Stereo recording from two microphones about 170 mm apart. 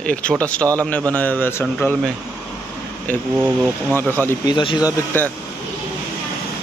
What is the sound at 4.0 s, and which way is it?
Speech, 15° left (ahead or behind).